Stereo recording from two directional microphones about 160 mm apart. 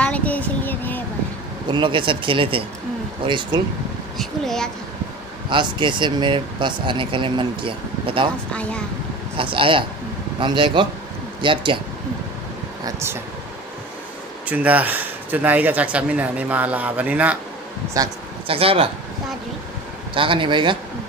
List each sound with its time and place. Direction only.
0.0 s a sound: 10° left (ahead or behind)
1.7 s speech: 30° right (ahead or behind)
4.2 s speech: centre (ahead or behind)
5.5 s speech: 30° right (ahead or behind)
9.4 s speech: 30° right (ahead or behind)
12.8 s speech: 15° right (ahead or behind)
14.5 s speech: 10° right (ahead or behind)
17.9 s speech: 20° right (ahead or behind)
18.5 s speech: 35° right (ahead or behind)
20.2 s speech: 30° right (ahead or behind)